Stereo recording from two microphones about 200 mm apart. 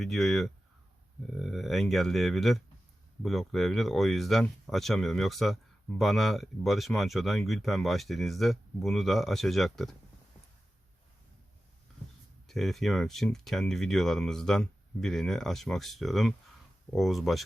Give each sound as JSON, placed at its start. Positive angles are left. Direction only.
{"t": 0.0, "sound": "speech", "side_deg": 0}
{"t": 12.5, "sound": "speech", "side_deg": 0}